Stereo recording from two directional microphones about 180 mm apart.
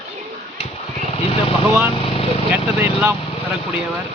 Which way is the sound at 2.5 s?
10° right (ahead or behind).